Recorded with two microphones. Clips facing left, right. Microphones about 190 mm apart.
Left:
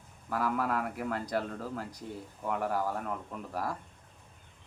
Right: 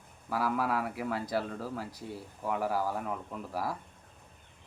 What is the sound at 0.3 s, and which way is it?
A man's voice, 5° right (ahead or behind).